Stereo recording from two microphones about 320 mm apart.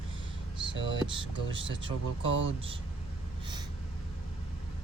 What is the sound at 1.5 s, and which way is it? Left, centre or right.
Speech, centre.